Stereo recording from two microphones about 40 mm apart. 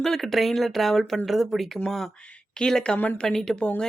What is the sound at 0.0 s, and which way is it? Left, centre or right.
Speech, centre.